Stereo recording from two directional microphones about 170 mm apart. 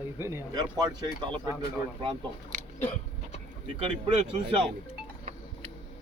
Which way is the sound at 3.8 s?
35° right (ahead or behind).